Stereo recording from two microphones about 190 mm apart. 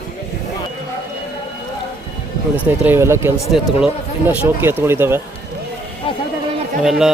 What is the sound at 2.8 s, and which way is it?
Speech, 10° right (ahead or behind).